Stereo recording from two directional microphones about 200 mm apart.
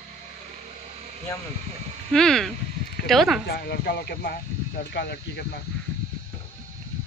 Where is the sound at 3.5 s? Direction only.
55° left (ahead or behind).